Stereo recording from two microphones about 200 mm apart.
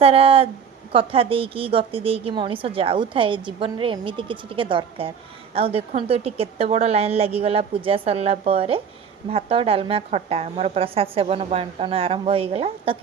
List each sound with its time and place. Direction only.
0.0 s a woman's voice: 30° right (ahead or behind)